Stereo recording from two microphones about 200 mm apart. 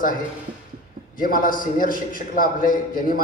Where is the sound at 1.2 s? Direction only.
45° left (ahead or behind).